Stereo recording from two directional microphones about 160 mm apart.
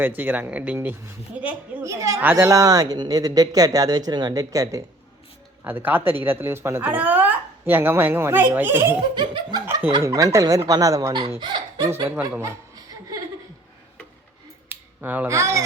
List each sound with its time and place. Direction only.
0.2 s a woman's voice: 10° right (ahead or behind)
9.1 s a woman's voice: 30° right (ahead or behind)
11.9 s speech: 15° right (ahead or behind)
12.4 s chuckle: 20° right (ahead or behind)
14.7 s speech: 10° right (ahead or behind)